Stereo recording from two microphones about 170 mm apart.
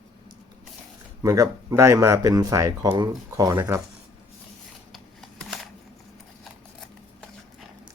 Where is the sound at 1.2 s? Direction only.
20° right (ahead or behind).